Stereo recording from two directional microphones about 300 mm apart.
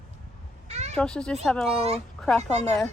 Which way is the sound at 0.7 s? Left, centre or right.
Right.